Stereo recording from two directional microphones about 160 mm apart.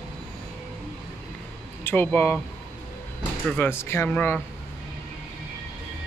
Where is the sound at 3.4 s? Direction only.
10° left (ahead or behind).